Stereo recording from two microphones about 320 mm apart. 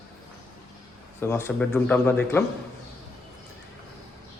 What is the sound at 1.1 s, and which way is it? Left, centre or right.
Speech, centre.